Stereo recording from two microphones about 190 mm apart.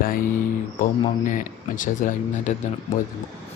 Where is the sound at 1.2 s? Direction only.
45° left (ahead or behind).